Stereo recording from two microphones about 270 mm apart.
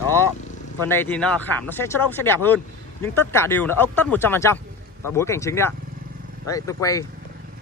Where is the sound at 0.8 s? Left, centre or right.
Centre.